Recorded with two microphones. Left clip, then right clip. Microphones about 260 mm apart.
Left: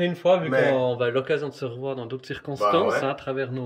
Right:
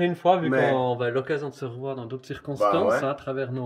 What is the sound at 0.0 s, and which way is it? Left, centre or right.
A man's voice, centre.